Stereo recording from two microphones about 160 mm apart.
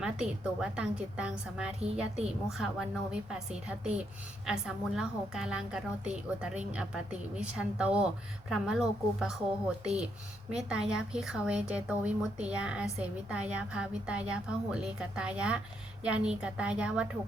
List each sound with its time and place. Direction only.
0.0 s a woman's voice: 5° right (ahead or behind)